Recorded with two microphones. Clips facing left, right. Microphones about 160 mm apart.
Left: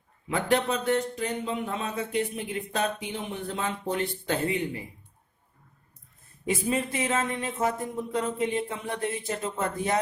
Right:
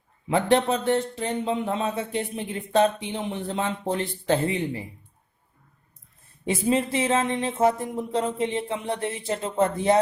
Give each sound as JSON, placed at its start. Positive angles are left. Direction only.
{"t": 0.3, "sound": "speech", "side_deg": -30}
{"t": 6.4, "sound": "speech", "side_deg": -25}